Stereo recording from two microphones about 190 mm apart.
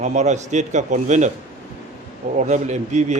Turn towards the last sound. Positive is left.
turn(degrees=-40)  # may be behind; listen again after turning